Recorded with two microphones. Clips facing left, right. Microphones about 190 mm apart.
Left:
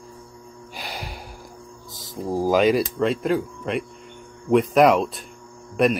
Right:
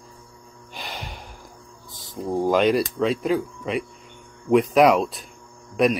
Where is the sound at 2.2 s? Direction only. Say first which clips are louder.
Left 1 dB; 5° left (ahead or behind).